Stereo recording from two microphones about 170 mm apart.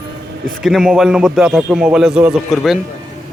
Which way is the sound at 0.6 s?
Centre (ahead or behind).